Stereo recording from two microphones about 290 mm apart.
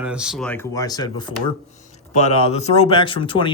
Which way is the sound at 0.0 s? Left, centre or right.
Centre.